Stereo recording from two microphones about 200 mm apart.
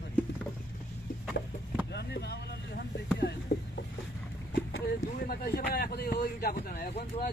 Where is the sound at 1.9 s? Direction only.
55° left (ahead or behind).